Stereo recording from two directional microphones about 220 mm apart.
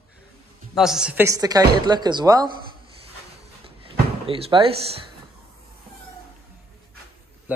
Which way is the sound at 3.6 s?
25° right (ahead or behind).